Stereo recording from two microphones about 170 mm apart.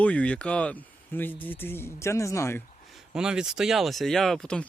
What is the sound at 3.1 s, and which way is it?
Speech, 5° right (ahead or behind).